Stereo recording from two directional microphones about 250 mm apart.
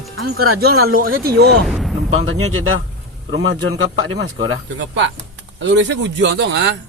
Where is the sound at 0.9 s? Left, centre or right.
Right.